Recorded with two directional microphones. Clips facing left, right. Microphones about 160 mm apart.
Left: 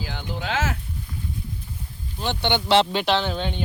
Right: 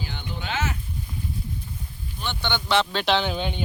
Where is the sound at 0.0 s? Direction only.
90° left.